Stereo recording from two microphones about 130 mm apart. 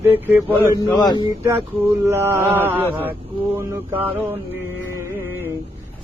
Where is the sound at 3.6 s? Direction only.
15° right (ahead or behind).